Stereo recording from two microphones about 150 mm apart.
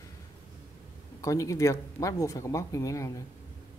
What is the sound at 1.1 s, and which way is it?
Speech, 20° left (ahead or behind).